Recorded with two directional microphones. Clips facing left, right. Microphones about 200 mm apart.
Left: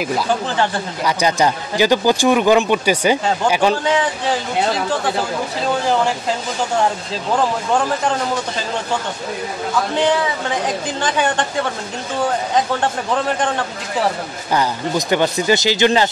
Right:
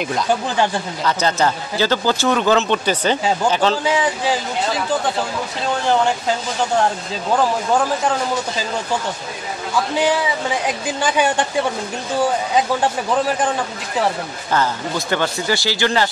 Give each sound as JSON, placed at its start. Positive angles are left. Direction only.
{"t": 1.0, "sound": "speech", "side_deg": 15}
{"t": 11.0, "sound": "a woman's voice", "side_deg": -10}
{"t": 13.1, "sound": "a man's voice", "side_deg": -5}
{"t": 14.5, "sound": "speech", "side_deg": 15}